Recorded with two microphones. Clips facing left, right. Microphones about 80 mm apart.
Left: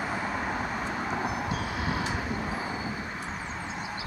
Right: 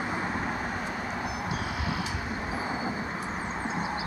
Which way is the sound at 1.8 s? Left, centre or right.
Left.